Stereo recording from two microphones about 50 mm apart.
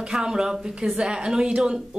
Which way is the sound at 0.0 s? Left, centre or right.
Centre.